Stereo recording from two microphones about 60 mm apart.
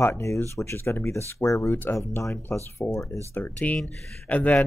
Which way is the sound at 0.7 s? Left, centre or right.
Left.